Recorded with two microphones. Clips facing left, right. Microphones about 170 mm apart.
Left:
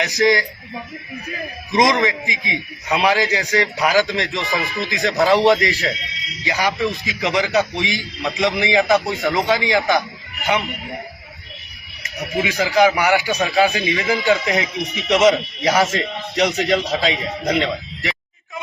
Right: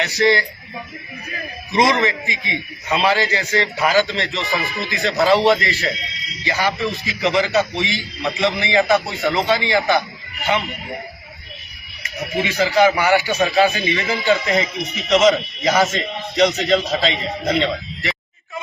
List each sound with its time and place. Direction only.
0.0 s a man's voice: 15° left (ahead or behind)
1.7 s a man's voice: 15° left (ahead or behind)
12.4 s a man's voice: 10° left (ahead or behind)